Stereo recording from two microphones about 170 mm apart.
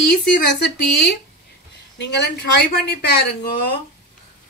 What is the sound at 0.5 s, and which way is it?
A woman's voice, 90° left.